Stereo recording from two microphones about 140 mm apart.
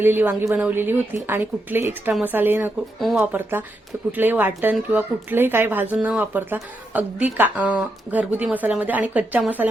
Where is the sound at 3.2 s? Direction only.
15° right (ahead or behind).